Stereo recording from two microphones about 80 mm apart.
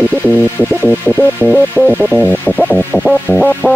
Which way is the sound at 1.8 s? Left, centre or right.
Centre.